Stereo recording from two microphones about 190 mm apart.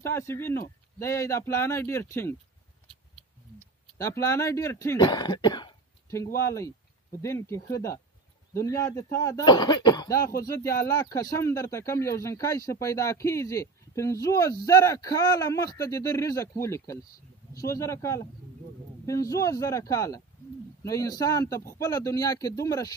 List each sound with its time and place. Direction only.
0.0 s speech: 15° left (ahead or behind)
3.5 s speech: 15° left (ahead or behind)